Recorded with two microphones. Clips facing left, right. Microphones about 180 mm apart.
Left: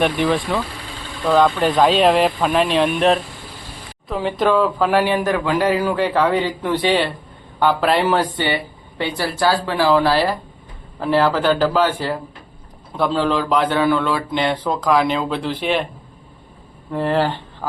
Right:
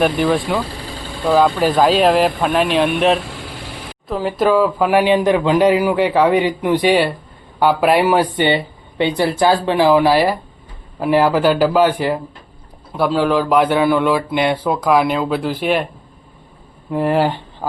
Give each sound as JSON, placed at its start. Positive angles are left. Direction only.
{"t": 0.0, "sound": "speech", "side_deg": 0}
{"t": 0.6, "sound": "vehicle", "side_deg": -35}
{"t": 1.2, "sound": "speech", "side_deg": -5}
{"t": 3.2, "sound": "vehicle", "side_deg": -80}
{"t": 4.1, "sound": "speech", "side_deg": -5}
{"t": 8.4, "sound": "speech", "side_deg": -20}
{"t": 16.9, "sound": "speech", "side_deg": -15}